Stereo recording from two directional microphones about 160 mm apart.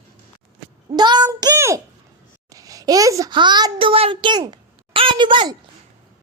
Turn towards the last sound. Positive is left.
turn(degrees=-30)  # may be behind; listen again after turning